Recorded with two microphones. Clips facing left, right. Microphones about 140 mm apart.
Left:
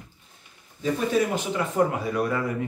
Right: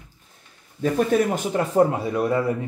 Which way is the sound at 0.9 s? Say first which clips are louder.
Right 3 dB; 45° right (ahead or behind).